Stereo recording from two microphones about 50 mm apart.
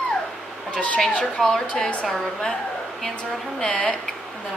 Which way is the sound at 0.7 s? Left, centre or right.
Left.